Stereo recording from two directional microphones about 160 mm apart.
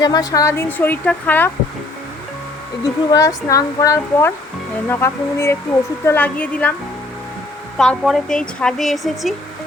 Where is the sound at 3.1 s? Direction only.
20° left (ahead or behind).